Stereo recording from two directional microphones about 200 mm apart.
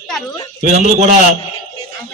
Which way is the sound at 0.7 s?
35° right (ahead or behind).